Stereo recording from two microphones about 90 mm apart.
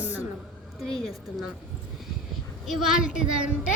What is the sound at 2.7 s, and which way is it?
Speech, 5° right (ahead or behind).